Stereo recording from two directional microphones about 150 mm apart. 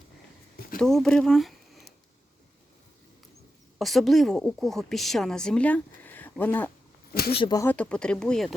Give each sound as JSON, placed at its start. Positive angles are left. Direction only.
{"t": 0.8, "sound": "speech", "side_deg": 5}
{"t": 3.8, "sound": "a woman's voice", "side_deg": 0}
{"t": 7.1, "sound": "a sound", "side_deg": 90}
{"t": 7.3, "sound": "speech", "side_deg": 30}
{"t": 7.6, "sound": "a woman's voice", "side_deg": 10}